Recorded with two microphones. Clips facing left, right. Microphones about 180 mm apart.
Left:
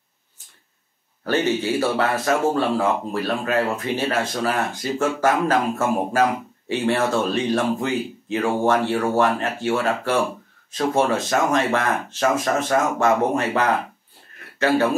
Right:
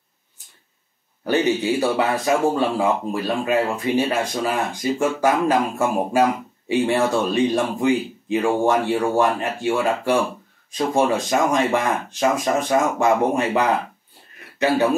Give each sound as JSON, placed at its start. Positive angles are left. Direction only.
{"t": 1.2, "sound": "speech", "side_deg": -15}